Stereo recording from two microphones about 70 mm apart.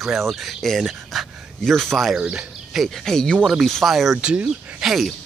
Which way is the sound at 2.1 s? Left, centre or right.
Centre.